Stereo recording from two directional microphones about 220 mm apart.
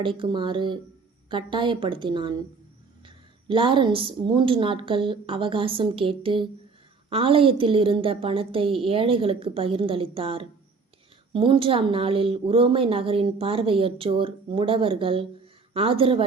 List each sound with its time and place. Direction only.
0.0 s a woman's voice: 20° right (ahead or behind)
3.5 s a woman's voice: 25° right (ahead or behind)